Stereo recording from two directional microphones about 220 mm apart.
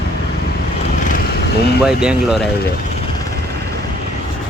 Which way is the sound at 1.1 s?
40° left (ahead or behind).